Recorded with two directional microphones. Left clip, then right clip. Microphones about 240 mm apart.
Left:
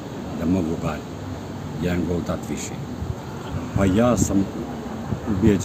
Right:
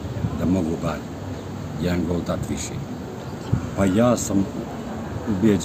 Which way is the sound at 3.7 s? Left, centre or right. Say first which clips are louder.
Even; centre.